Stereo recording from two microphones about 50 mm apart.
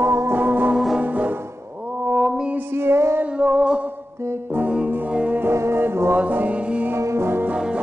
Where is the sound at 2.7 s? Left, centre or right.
Right.